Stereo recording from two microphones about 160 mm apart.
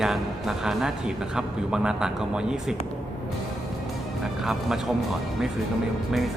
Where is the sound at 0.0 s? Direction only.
5° right (ahead or behind).